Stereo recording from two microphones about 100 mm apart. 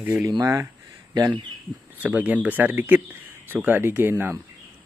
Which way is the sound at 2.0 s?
15° right (ahead or behind).